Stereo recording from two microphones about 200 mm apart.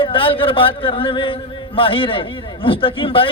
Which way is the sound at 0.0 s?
25° left (ahead or behind).